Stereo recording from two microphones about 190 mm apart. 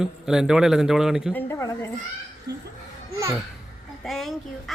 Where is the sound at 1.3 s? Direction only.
10° left (ahead or behind).